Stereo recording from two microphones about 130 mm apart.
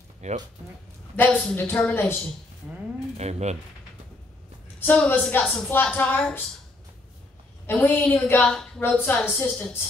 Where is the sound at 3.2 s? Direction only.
60° right (ahead or behind).